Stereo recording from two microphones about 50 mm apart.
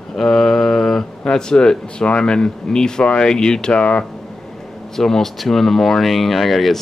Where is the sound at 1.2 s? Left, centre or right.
Centre.